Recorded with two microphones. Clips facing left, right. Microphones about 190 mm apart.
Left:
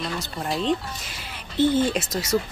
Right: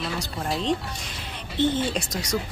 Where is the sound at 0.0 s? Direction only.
Centre (ahead or behind).